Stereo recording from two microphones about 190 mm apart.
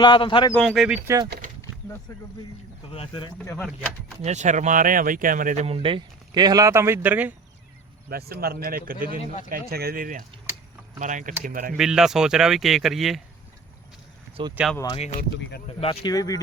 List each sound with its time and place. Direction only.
0.0 s speech: 25° left (ahead or behind)
0.5 s speech: centre (ahead or behind)
1.0 s speech: 15° right (ahead or behind)
2.9 s speech: 30° left (ahead or behind)
3.6 s speech: 5° right (ahead or behind)
4.2 s speech: 35° right (ahead or behind); by 7.3 s 10° right (ahead or behind)
8.1 s speech: 55° right (ahead or behind)
9.1 s speech: 40° left (ahead or behind)
9.5 s speech: 55° right (ahead or behind)
11.8 s speech: centre (ahead or behind)
14.4 s speech: 25° right (ahead or behind)
15.8 s speech: 30° left (ahead or behind)